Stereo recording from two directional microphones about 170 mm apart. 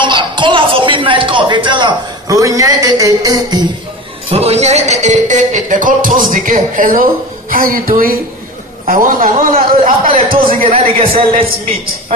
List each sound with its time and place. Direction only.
0.0 s music: 30° right (ahead or behind)
4.3 s a man's voice: 35° right (ahead or behind); by 10.7 s 55° right (ahead or behind)